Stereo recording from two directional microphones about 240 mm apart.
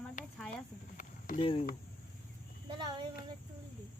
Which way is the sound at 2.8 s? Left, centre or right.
Centre.